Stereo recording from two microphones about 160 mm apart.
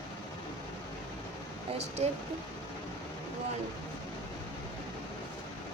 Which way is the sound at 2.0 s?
40° right (ahead or behind).